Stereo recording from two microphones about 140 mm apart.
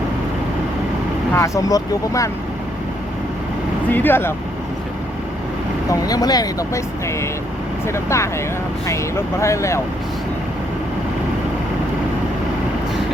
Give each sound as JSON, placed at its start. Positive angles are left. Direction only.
{"t": 1.3, "sound": "speech", "side_deg": 20}
{"t": 3.8, "sound": "speech", "side_deg": 15}
{"t": 5.9, "sound": "speech", "side_deg": 25}